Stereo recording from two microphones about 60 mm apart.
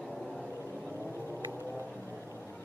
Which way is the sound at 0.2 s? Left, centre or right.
Centre.